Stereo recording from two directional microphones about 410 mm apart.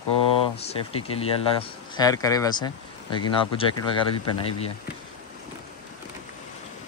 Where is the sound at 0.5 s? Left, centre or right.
Centre.